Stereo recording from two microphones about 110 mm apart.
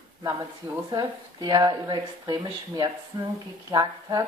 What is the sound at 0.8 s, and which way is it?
A woman's voice, 40° right (ahead or behind).